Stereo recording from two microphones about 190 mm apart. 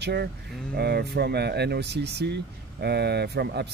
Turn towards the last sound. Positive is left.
turn(degrees=-60)  # may be behind; listen again after turning